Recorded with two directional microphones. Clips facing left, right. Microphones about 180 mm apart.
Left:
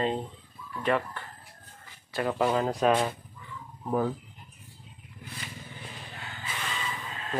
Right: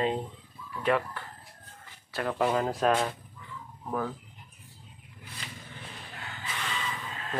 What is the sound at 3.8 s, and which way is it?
Speech, 20° left (ahead or behind).